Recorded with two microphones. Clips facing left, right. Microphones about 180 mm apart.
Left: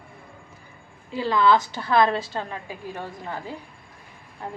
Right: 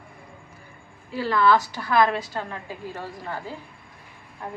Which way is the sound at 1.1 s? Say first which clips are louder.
Even; 20° left (ahead or behind).